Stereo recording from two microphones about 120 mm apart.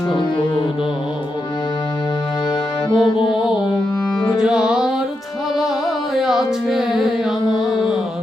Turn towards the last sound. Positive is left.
turn(degrees=-5)  # may be behind; listen again after turning